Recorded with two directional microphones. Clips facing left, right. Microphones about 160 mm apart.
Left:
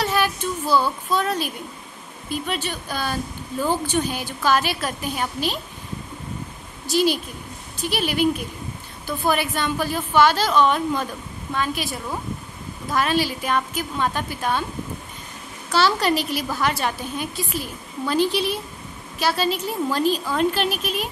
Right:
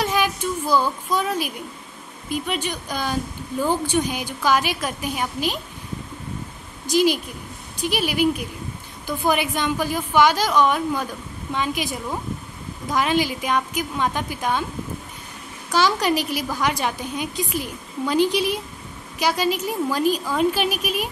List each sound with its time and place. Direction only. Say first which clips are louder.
0.0 s a sound: even; 15° right (ahead or behind)
2.2 s a woman's voice: right 1 dB; 15° right (ahead or behind)
6.9 s a woman's voice: right 1 dB; 15° right (ahead or behind)
15.7 s a woman's voice: even; 15° right (ahead or behind)